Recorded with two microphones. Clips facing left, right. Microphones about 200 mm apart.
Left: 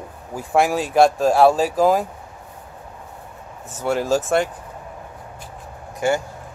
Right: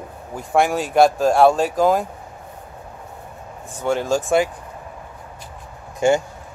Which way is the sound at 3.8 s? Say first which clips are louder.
Even; 5° left (ahead or behind).